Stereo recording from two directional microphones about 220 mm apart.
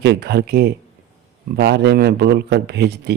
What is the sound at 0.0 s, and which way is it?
A man's voice, 45° right (ahead or behind).